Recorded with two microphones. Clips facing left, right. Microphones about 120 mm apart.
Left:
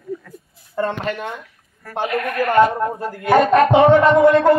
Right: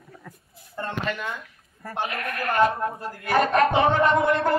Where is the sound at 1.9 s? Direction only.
85° left.